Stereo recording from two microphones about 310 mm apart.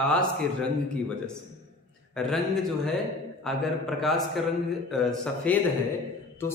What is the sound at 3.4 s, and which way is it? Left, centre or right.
A man's voice, centre.